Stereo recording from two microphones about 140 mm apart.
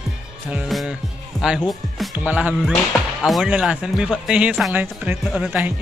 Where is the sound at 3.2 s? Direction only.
Centre (ahead or behind).